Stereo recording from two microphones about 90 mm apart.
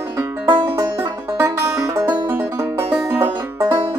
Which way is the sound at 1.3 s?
30° right (ahead or behind).